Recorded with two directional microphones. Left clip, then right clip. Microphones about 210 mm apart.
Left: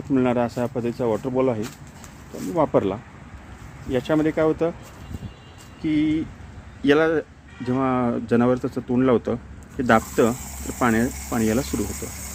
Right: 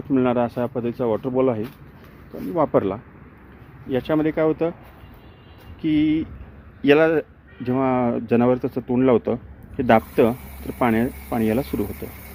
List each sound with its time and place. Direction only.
0.1 s speech: 15° right (ahead or behind)
5.8 s a sound: 20° right (ahead or behind)
6.8 s speech: 20° right (ahead or behind)